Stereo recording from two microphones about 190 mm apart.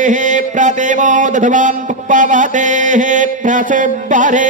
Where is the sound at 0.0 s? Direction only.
40° right (ahead or behind).